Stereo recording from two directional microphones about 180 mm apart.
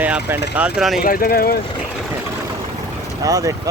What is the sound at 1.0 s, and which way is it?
Speech, 55° left (ahead or behind).